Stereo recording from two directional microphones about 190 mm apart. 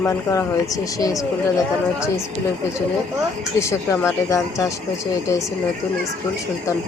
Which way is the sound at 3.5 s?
15° left (ahead or behind).